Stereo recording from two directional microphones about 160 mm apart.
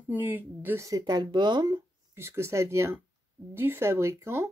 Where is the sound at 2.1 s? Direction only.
15° right (ahead or behind).